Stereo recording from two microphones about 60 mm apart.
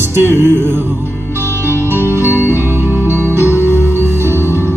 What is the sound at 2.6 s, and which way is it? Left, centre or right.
Music, right.